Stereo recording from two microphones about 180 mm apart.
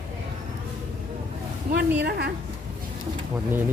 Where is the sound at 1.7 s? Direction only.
65° right (ahead or behind).